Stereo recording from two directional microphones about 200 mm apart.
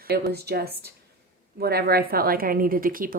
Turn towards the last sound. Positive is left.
turn(degrees=-45)  # may be behind; listen again after turning